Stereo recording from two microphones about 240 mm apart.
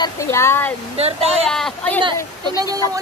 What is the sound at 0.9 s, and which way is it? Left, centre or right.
Speech, right.